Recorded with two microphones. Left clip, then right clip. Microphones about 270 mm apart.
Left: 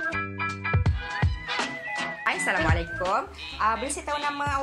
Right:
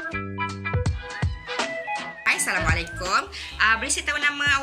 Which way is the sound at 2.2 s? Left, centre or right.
Left.